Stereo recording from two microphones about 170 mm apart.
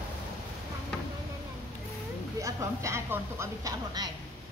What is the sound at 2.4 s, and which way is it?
Speech, 15° right (ahead or behind).